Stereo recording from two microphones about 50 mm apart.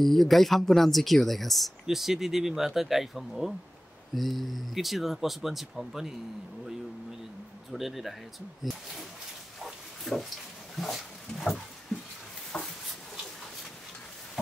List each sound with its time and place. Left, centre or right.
0.0 s speech: centre
7.7 s speech: centre
9.6 s pig: centre
10.8 s dog: centre
12.5 s a sound: left